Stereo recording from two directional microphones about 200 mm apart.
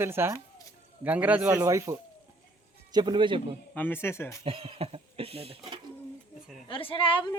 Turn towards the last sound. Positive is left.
turn(degrees=25)  # may be behind; listen again after turning